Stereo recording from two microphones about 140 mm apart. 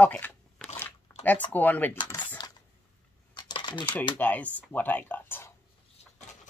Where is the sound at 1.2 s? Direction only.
10° left (ahead or behind).